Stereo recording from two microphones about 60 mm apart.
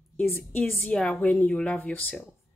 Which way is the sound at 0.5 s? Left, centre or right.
Left.